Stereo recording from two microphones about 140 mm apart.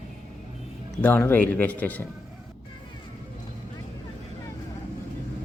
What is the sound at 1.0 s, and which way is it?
A man's voice, 15° left (ahead or behind).